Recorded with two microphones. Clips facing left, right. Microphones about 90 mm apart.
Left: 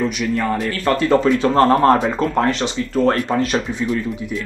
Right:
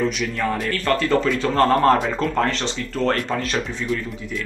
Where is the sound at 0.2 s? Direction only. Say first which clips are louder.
Left 4 dB; 5° left (ahead or behind).